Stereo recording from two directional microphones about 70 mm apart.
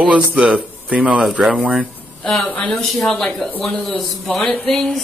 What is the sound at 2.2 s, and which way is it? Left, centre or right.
A woman's voice, centre.